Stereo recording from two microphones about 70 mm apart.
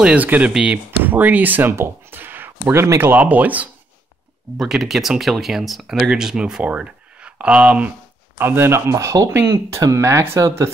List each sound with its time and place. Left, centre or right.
0.0 s speech: right
1.0 s speech: right
2.7 s speech: right
4.6 s speech: centre
8.4 s speech: right